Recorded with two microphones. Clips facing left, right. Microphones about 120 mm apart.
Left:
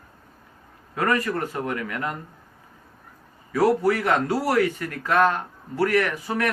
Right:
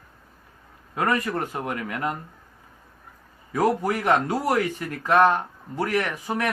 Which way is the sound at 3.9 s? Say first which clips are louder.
Even; 15° right (ahead or behind).